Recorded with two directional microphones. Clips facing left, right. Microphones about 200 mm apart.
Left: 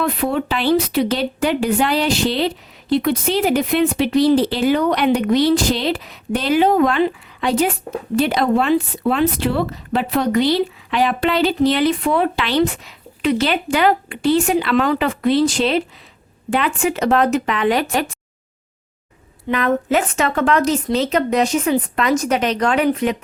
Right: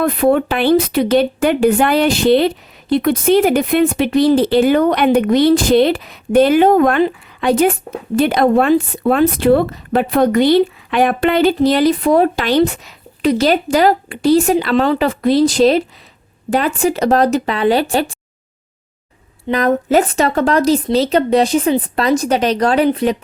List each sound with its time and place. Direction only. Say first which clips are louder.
0.0 s speech: right 6 dB; 50° right (ahead or behind); by 18.0 s 30° right (ahead or behind)
19.5 s speech: right 3 dB; 40° right (ahead or behind)